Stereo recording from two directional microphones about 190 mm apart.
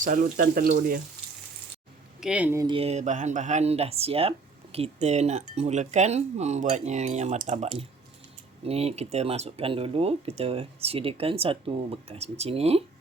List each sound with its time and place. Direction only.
0.0 s speech: 45° right (ahead or behind)
0.4 s speech: 55° right (ahead or behind)
2.2 s speech: 5° right (ahead or behind)
2.6 s speech: 30° right (ahead or behind)